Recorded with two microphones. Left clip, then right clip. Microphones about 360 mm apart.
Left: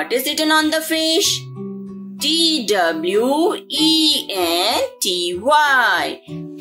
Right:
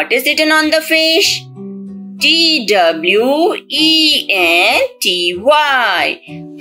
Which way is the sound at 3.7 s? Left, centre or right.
Left.